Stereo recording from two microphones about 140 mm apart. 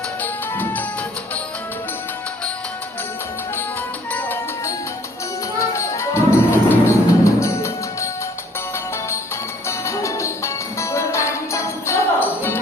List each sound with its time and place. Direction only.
0.2 s music: 15° left (ahead or behind)
4.1 s music: 15° left (ahead or behind)
5.7 s music: 20° left (ahead or behind)
9.6 s music: 20° left (ahead or behind)